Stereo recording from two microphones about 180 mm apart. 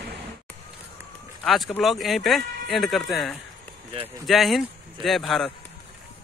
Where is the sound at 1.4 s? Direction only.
Centre (ahead or behind).